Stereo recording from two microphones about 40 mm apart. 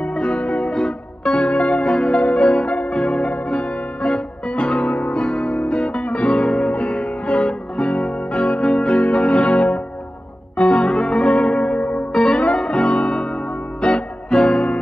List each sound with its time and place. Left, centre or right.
0.0 s music: left
0.7 s music: centre
6.0 s music: left
6.4 s music: centre
6.7 s music: left
7.4 s music: centre
8.6 s music: centre
9.4 s music: left
10.6 s music: left
10.9 s music: centre; by 12.0 s left
12.1 s music: centre
12.8 s music: left